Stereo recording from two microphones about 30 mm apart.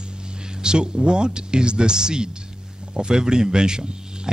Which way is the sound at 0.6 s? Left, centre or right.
Right.